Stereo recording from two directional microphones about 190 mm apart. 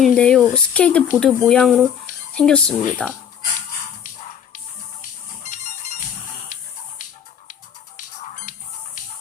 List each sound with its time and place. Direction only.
0.0 s speech: 5° left (ahead or behind)
5.4 s music: 40° left (ahead or behind)